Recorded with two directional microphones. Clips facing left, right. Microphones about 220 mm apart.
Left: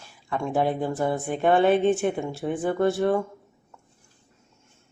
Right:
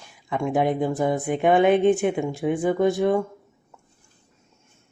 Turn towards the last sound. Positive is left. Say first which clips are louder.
# right 2 dB
turn(degrees=-15)  # may be behind; listen again after turning